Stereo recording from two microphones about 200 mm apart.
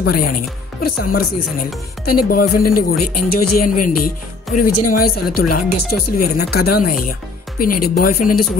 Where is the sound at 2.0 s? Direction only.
50° left (ahead or behind).